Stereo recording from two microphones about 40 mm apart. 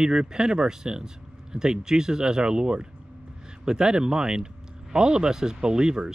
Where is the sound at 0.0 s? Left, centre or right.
Centre.